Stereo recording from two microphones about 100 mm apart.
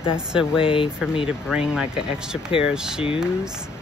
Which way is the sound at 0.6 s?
60° left (ahead or behind).